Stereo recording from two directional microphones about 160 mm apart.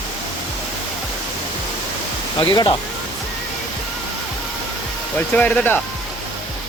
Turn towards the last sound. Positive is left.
turn(degrees=10)  # may be behind; listen again after turning